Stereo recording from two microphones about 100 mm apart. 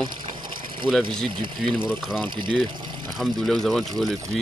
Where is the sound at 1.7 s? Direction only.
5° right (ahead or behind).